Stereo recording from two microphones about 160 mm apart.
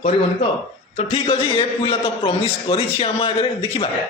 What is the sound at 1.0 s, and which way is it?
A man's voice, 40° left (ahead or behind).